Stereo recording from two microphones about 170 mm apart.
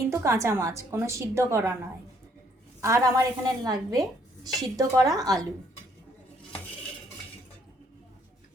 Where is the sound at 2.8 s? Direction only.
20° right (ahead or behind).